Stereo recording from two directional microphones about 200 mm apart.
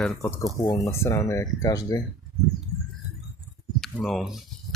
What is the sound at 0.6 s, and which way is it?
Speech, 15° left (ahead or behind).